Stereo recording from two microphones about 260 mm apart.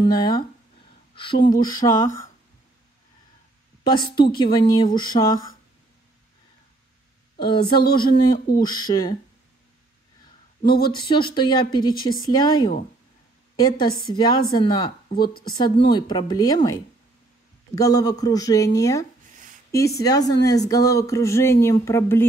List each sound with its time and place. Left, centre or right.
0.0 s speech: centre
3.8 s speech: centre
7.3 s speech: centre
11.1 s speech: centre
13.6 s speech: centre
15.3 s speech: left
15.6 s speech: centre
17.7 s speech: centre